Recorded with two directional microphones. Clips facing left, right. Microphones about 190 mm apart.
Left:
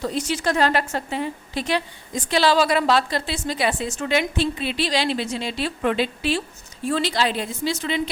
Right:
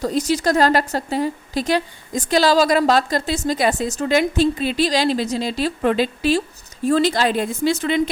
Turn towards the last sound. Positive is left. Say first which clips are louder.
# right 6 dB
turn(degrees=-55)  # may be behind; listen again after turning